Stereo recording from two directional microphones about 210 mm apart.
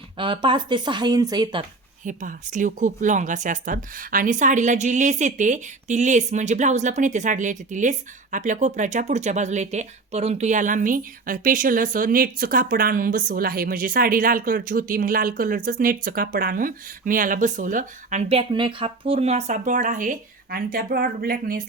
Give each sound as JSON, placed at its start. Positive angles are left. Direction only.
{"t": 0.2, "sound": "speech", "side_deg": -25}
{"t": 2.0, "sound": "a woman's voice", "side_deg": -40}